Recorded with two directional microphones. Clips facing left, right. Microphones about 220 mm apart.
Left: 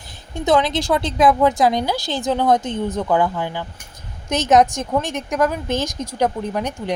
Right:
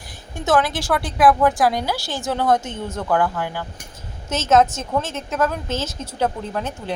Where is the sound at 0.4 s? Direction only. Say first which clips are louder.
Left 2 dB; 20° left (ahead or behind).